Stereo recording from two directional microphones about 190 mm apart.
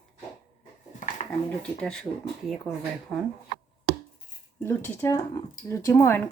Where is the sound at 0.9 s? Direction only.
45° left (ahead or behind).